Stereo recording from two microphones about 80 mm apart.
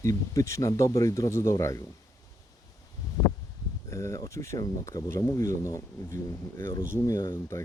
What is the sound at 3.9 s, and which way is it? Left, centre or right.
Speech, left.